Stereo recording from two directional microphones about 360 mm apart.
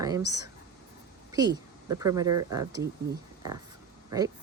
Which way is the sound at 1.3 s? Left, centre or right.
Centre.